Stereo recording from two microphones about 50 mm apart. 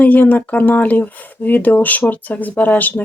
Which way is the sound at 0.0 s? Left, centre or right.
Left.